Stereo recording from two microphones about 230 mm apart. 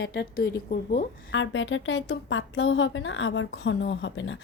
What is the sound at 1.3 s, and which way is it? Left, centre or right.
A woman's voice, left.